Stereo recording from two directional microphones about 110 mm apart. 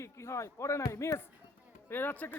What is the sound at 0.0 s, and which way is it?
Speech, 25° left (ahead or behind).